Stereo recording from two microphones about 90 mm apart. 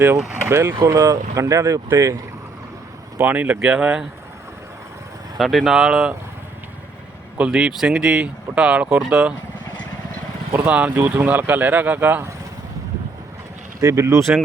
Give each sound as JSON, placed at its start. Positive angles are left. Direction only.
{"t": 0.4, "sound": "speech", "side_deg": -30}
{"t": 3.2, "sound": "speech", "side_deg": -20}
{"t": 5.4, "sound": "speech", "side_deg": 0}
{"t": 7.3, "sound": "speech", "side_deg": -10}
{"t": 10.7, "sound": "speech", "side_deg": -15}
{"t": 13.8, "sound": "speech", "side_deg": -35}